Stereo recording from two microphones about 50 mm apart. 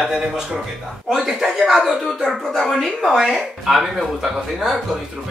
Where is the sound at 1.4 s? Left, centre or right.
Centre.